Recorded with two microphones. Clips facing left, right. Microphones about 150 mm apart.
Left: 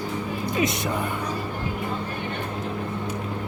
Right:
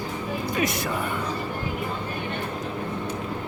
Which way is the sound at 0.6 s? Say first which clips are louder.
Left 2 dB; 20° left (ahead or behind).